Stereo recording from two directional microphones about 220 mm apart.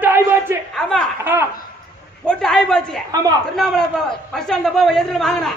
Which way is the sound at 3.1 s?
15° right (ahead or behind).